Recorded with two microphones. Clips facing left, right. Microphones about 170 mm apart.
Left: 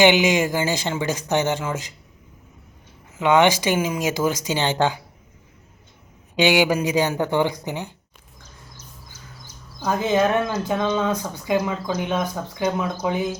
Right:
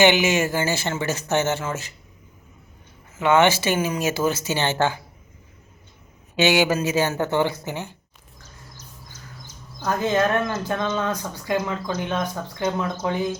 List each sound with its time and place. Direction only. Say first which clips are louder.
0.0 s speech: left 1 dB; 15° left (ahead or behind)
3.2 s speech: left 1 dB; 15° left (ahead or behind)
6.3 s speech: left 1 dB; 15° left (ahead or behind)
9.8 s speech: left 1 dB; 15° left (ahead or behind)